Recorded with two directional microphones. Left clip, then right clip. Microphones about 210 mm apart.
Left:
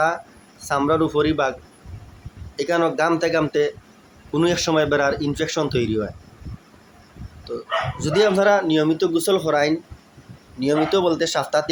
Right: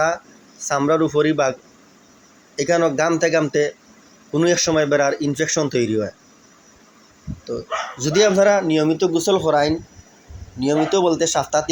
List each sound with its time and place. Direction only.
0.6 s a man's voice: 5° right (ahead or behind)
2.6 s speech: 5° right (ahead or behind)
8.0 s speech: 10° right (ahead or behind)